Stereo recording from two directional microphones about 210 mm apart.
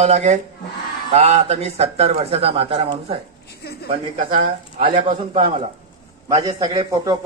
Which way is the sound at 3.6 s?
50° left (ahead or behind).